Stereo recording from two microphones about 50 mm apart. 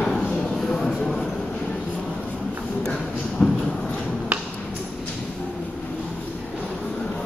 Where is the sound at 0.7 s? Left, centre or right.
Centre.